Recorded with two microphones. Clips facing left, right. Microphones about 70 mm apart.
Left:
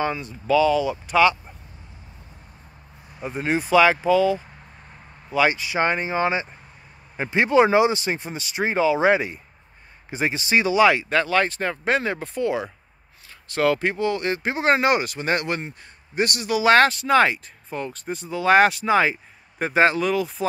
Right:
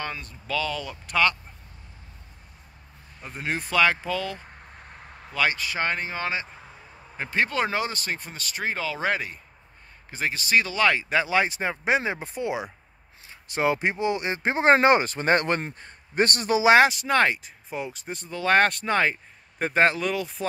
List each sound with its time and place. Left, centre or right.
0.0 s speech: centre
3.2 s speech: centre
11.1 s speech: centre; by 16.6 s right
16.6 s speech: centre